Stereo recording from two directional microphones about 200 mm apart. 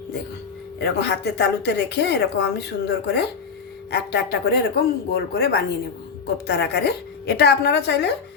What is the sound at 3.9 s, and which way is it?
A woman's voice, 55° left (ahead or behind).